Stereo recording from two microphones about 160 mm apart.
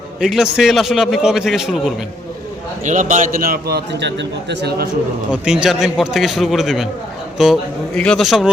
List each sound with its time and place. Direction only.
0.2 s a man's voice: 5° right (ahead or behind)
2.8 s a man's voice: 50° right (ahead or behind); by 4.9 s 90° right
5.3 s a man's voice: 5° right (ahead or behind)